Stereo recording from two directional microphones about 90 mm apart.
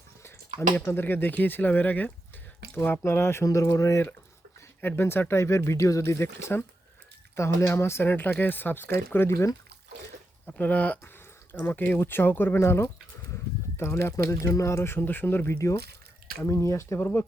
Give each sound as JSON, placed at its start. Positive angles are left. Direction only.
{"t": 0.9, "sound": "speech", "side_deg": 25}
{"t": 4.8, "sound": "speech", "side_deg": 25}
{"t": 10.4, "sound": "speech", "side_deg": 15}
{"t": 15.5, "sound": "speech", "side_deg": 35}